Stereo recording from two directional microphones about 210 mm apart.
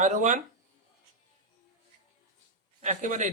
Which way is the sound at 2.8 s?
35° right (ahead or behind).